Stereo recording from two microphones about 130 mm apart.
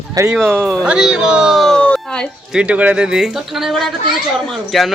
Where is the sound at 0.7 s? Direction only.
5° right (ahead or behind).